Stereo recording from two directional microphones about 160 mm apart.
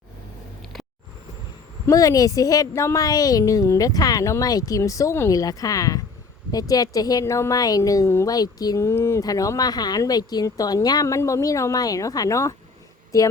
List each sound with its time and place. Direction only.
1.9 s a woman's voice: 20° left (ahead or behind)